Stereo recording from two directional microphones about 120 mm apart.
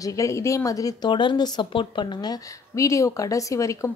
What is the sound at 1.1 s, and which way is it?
A woman's voice, 40° left (ahead or behind).